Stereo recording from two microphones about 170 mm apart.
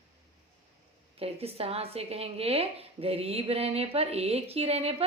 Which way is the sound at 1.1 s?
35° right (ahead or behind).